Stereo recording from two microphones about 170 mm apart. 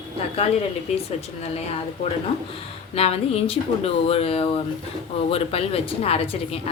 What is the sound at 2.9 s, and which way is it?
A woman's voice, 35° left (ahead or behind).